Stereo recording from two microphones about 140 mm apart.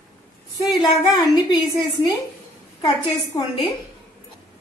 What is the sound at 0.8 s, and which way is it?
Speech, 25° left (ahead or behind).